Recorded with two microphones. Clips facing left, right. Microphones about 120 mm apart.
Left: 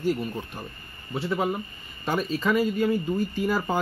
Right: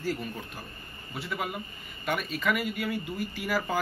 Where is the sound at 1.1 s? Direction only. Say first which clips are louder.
Left 8 dB; 30° left (ahead or behind).